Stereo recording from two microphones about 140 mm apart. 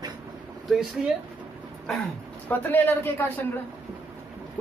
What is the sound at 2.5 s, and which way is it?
Speech, 15° left (ahead or behind).